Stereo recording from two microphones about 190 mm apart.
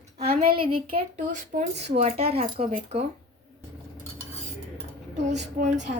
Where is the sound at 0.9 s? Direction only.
40° right (ahead or behind).